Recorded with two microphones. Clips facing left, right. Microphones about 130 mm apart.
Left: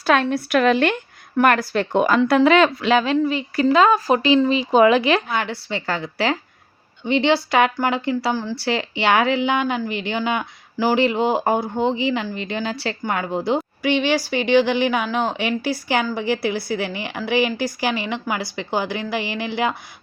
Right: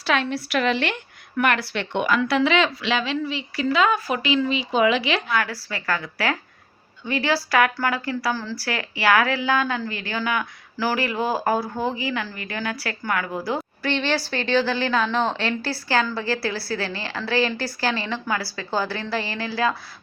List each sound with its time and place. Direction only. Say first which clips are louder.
0.0 s a woman's voice: left 5 dB; 45° left (ahead or behind)
5.3 s a woman's voice: left 1 dB; 25° left (ahead or behind)